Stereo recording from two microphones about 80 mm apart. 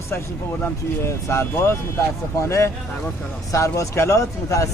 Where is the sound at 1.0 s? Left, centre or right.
Left.